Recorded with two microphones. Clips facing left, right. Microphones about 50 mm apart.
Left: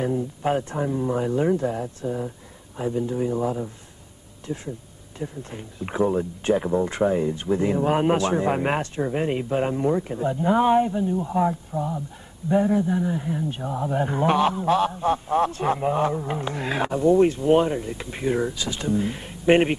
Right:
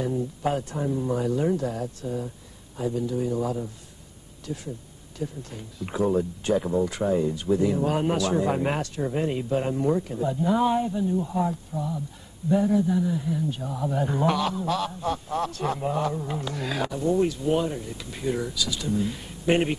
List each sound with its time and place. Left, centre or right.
0.5 s a man's voice: left